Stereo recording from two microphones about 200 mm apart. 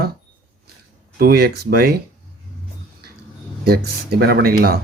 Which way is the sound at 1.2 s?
50° right (ahead or behind).